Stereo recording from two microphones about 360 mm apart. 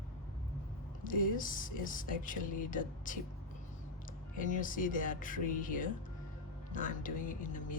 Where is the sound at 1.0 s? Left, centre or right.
Left.